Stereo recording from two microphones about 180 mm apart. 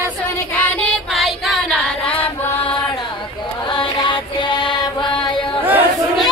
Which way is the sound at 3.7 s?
25° left (ahead or behind).